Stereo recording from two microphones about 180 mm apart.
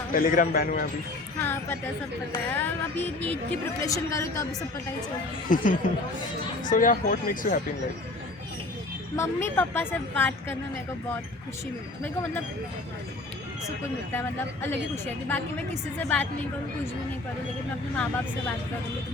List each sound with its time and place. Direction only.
0.1 s speech: 50° left (ahead or behind)
1.4 s a woman's voice: 10° left (ahead or behind)
5.5 s speech: 50° left (ahead or behind)
6.7 s speech: 50° left (ahead or behind)
9.1 s a woman's voice: 15° left (ahead or behind)
14.1 s a woman's voice: 10° left (ahead or behind)
17.9 s a woman's voice: 10° left (ahead or behind)